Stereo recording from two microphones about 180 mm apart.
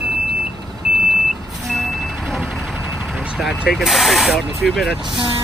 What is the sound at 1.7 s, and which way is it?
Vehicle, centre (ahead or behind).